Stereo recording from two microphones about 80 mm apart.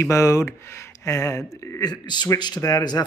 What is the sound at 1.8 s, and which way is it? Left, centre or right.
Speech, left.